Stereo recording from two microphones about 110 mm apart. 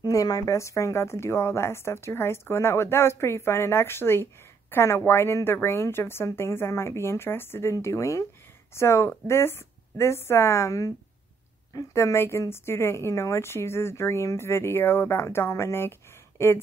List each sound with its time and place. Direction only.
0.0 s speech: 35° left (ahead or behind)